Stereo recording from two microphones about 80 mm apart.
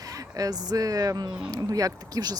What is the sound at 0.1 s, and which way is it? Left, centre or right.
Speech, right.